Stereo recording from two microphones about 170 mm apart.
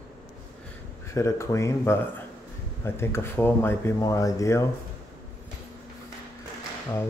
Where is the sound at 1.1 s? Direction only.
15° left (ahead or behind).